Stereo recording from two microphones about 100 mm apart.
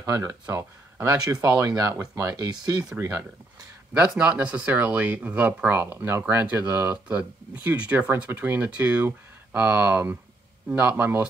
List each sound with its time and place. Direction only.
0.0 s speech: 35° right (ahead or behind)
1.4 s speech: 35° right (ahead or behind)
3.9 s speech: 10° right (ahead or behind)